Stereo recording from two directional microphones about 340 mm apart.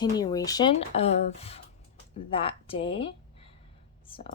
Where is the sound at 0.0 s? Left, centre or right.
Centre.